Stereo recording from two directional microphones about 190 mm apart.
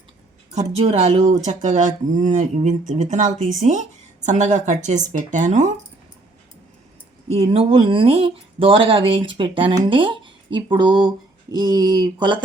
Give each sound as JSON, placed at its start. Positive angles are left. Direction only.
{"t": 0.5, "sound": "speech", "side_deg": -35}
{"t": 7.5, "sound": "speech", "side_deg": -30}